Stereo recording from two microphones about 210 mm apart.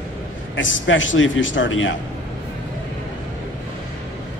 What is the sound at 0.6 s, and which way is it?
A man's voice, 65° left (ahead or behind).